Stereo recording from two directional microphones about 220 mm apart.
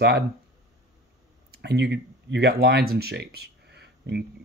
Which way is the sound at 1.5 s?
50° right (ahead or behind).